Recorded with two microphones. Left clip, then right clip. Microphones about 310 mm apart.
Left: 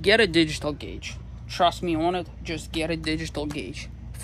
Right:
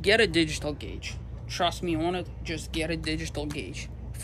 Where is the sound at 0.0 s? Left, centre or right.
Centre.